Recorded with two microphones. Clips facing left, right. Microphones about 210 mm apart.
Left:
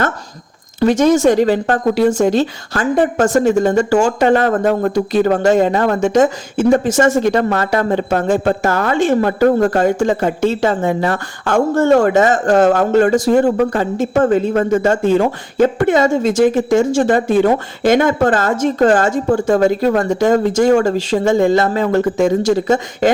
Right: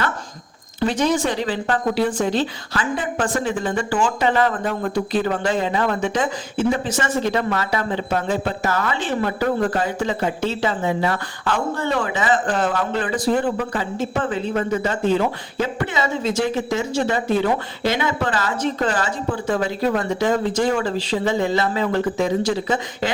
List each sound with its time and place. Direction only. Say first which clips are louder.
0.8 s speech: left 8 dB; 45° left (ahead or behind)